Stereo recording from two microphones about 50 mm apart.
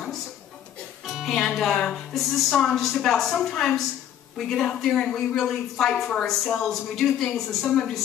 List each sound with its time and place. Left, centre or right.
1.2 s a woman's voice: centre
2.1 s a woman's voice: centre